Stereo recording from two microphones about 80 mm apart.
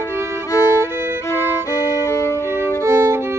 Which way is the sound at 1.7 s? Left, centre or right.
Left.